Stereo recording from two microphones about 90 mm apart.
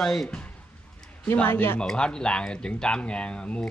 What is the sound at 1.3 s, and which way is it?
Speech, 20° left (ahead or behind).